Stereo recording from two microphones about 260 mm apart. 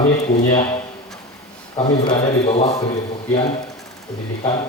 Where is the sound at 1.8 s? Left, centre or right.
Centre.